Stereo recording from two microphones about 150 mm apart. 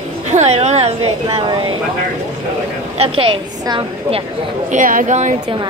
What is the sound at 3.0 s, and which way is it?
A woman's voice, 35° right (ahead or behind).